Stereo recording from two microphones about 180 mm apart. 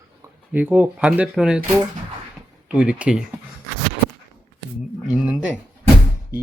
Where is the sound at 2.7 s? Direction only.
5° right (ahead or behind).